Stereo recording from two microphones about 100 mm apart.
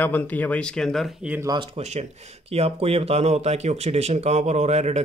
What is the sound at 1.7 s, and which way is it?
Speech, 90° right.